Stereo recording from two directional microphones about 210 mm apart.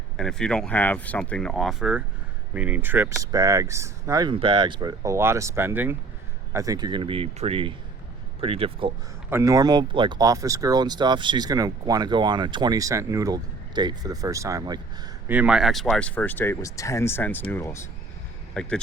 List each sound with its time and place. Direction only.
0.2 s speech: 5° left (ahead or behind); by 8.9 s 25° right (ahead or behind)
9.3 s speech: 15° right (ahead or behind)
15.3 s speech: 5° right (ahead or behind)